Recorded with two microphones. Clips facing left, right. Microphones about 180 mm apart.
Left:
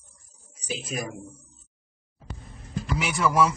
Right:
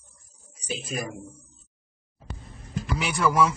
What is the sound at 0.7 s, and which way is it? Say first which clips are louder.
Speech: even; centre (ahead or behind).